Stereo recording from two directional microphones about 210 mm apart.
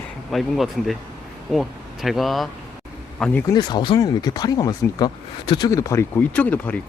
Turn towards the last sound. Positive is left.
turn(degrees=5)  # may be behind; listen again after turning